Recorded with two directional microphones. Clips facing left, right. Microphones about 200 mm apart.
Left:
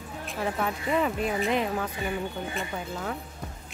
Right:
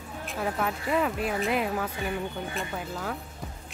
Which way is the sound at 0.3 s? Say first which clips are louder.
Even; centre (ahead or behind).